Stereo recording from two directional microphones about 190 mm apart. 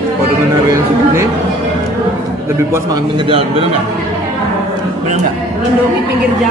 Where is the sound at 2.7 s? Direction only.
20° right (ahead or behind).